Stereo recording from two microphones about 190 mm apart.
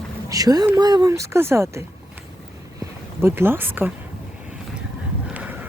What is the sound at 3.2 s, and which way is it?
Speech, 10° right (ahead or behind).